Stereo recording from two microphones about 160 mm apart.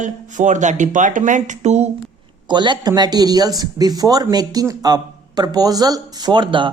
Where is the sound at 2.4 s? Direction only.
30° right (ahead or behind).